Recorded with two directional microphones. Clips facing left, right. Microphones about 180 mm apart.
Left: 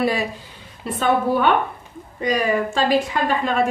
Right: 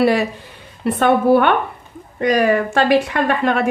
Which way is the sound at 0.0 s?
65° right (ahead or behind).